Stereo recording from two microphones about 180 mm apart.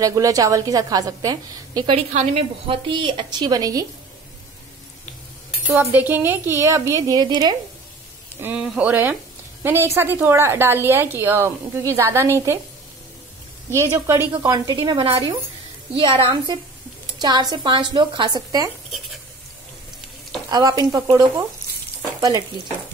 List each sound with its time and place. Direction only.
0.0 s a woman's voice: 20° right (ahead or behind)
2.1 s a woman's voice: 35° right (ahead or behind)
5.8 s a woman's voice: 10° right (ahead or behind)
8.4 s a woman's voice: 10° right (ahead or behind)
13.7 s a woman's voice: 15° right (ahead or behind)
14.3 s a woman's voice: 25° right (ahead or behind)
20.4 s a woman's voice: 20° right (ahead or behind)